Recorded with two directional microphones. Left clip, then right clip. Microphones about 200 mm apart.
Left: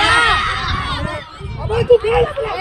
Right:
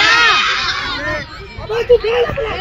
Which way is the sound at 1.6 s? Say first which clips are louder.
Even; 30° right (ahead or behind).